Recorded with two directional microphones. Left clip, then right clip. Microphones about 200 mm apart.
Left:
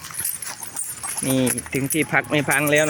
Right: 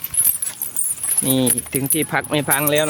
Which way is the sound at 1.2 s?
30° right (ahead or behind).